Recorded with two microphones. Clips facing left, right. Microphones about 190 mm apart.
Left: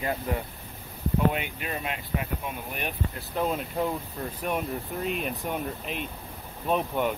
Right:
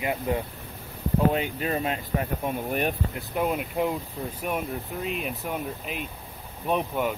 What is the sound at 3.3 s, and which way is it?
Speech, 10° right (ahead or behind).